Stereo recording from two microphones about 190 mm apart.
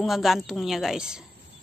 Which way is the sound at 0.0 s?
Centre (ahead or behind).